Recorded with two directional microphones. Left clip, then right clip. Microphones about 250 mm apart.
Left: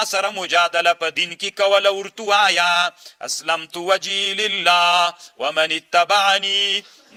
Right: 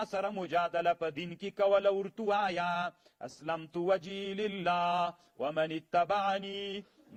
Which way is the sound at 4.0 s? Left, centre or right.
Centre.